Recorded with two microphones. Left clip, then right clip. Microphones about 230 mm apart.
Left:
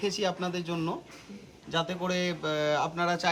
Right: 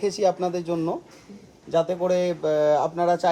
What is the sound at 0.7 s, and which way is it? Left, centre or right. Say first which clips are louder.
Speech: right 7 dB; left.